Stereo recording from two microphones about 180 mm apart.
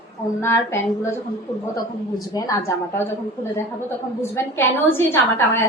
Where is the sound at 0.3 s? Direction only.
15° left (ahead or behind).